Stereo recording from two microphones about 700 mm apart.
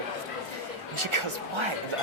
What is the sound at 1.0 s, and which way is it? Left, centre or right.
Speech, right.